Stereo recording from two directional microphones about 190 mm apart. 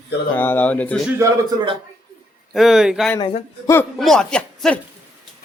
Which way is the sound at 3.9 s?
Centre (ahead or behind).